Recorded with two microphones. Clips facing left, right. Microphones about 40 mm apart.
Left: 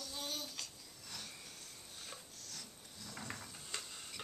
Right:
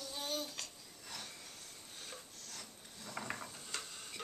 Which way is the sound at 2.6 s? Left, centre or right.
Right.